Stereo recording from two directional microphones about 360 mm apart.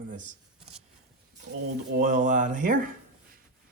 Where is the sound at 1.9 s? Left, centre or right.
Right.